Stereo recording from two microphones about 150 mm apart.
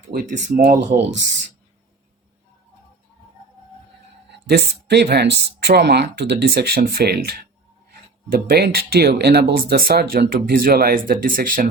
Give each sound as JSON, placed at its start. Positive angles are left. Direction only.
{"t": 0.1, "sound": "speech", "side_deg": -80}
{"t": 0.3, "sound": "speech", "side_deg": -60}
{"t": 4.4, "sound": "speech", "side_deg": -90}